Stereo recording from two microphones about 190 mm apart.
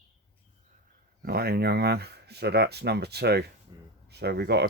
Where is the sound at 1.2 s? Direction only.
55° right (ahead or behind).